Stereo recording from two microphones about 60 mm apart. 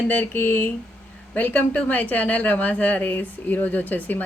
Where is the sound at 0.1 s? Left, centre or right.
Left.